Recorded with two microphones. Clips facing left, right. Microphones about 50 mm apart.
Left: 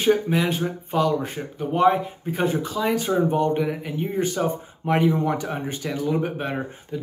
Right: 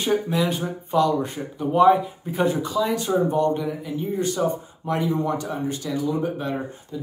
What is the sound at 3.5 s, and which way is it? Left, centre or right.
Speech, left.